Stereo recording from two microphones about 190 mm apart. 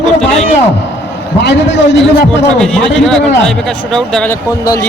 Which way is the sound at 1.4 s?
65° left (ahead or behind).